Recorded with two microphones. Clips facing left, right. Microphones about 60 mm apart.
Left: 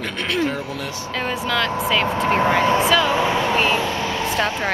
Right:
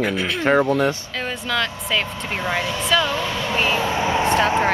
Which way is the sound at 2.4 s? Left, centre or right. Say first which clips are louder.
Left 5 dB; left.